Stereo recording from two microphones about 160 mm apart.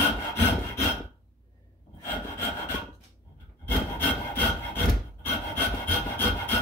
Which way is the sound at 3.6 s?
15° left (ahead or behind).